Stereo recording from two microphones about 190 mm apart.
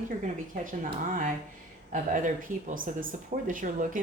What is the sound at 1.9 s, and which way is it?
Speech, 40° right (ahead or behind).